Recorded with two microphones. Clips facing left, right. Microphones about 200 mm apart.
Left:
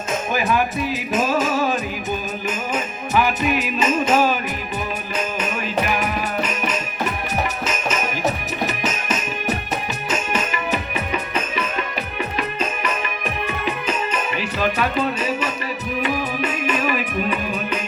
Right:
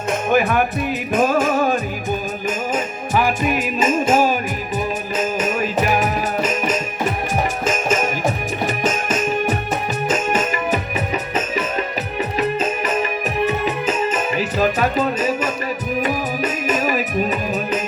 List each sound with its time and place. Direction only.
0.3 s music: 55° right (ahead or behind)